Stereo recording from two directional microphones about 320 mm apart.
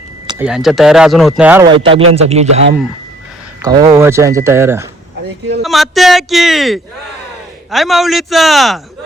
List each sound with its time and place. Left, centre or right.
0.3 s speech: centre
1.8 s speech: centre
3.6 s speech: centre